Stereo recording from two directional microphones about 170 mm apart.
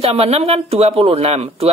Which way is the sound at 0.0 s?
35° right (ahead or behind).